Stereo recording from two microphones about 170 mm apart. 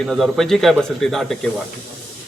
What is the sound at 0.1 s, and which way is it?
A man's voice, centre (ahead or behind).